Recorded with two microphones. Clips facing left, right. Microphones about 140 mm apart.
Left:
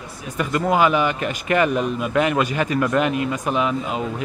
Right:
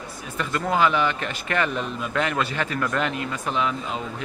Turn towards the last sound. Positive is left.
turn(degrees=15)  # may be behind; listen again after turning